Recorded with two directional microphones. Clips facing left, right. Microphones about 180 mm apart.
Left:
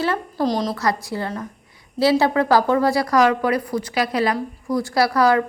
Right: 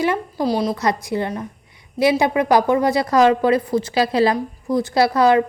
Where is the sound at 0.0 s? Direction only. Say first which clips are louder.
Right 1 dB; 15° right (ahead or behind).